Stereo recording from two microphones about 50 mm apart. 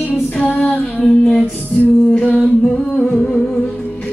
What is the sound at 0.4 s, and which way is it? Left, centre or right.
Child singing, left.